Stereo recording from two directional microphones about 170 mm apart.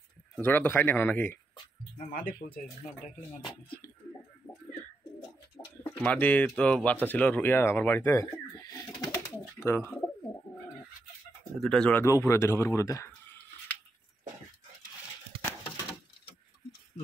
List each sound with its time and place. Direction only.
0.4 s speech: 10° left (ahead or behind)
2.0 s speech: 55° left (ahead or behind)
5.6 s bird: 20° left (ahead or behind)
5.9 s speech: 10° left (ahead or behind)
11.6 s speech: 5° left (ahead or behind)
12.0 s speech: 15° left (ahead or behind)